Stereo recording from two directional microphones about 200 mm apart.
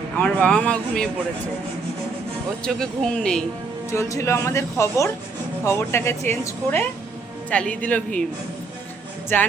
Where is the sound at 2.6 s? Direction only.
5° left (ahead or behind).